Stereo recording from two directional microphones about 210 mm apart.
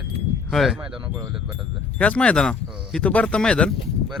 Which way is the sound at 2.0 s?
5° left (ahead or behind).